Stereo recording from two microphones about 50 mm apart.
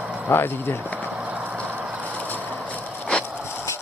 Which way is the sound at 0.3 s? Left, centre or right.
Left.